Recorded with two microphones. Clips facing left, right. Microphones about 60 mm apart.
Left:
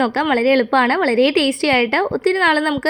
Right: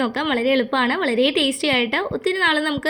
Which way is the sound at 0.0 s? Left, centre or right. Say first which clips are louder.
Left 4 dB; left.